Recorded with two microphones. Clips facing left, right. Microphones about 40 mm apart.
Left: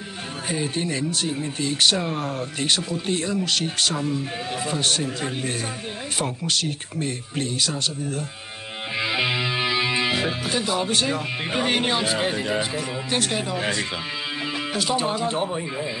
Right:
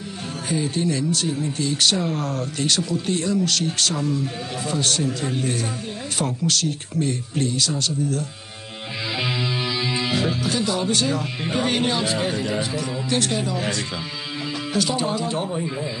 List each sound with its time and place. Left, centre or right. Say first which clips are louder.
0.5 s speech: right 3 dB; left
15.0 s speech: even; left